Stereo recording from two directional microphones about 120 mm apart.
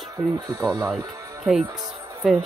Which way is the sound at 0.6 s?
30° right (ahead or behind).